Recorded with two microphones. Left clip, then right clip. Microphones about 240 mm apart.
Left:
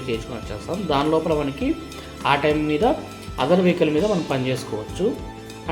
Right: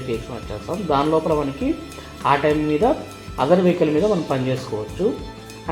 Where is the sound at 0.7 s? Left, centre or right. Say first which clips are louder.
Right 2 dB; centre.